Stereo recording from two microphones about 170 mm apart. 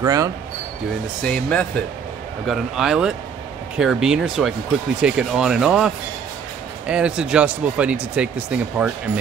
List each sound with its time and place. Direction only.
0.0 s speech: 20° right (ahead or behind)
1.2 s speech: 5° left (ahead or behind)